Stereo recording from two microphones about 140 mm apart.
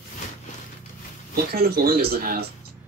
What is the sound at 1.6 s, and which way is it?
Speech, 90° right.